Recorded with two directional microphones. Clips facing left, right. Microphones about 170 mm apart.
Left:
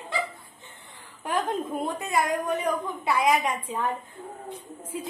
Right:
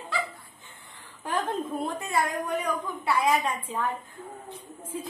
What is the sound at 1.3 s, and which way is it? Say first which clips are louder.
A woman's voice: left 2 dB; 15° left (ahead or behind).